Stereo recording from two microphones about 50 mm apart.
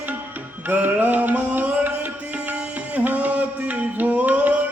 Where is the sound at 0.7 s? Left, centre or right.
Right.